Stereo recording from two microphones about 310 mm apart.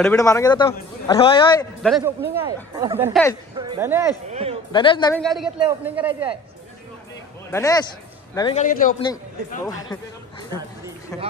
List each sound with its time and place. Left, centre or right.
0.0 s a man's voice: centre
1.8 s speech: centre
2.4 s speech: centre
3.1 s speech: centre
3.5 s speech: centre
4.3 s speech: centre
4.7 s a man's voice: centre
5.2 s speech: centre
7.5 s a man's voice: centre
8.6 s a man's voice: left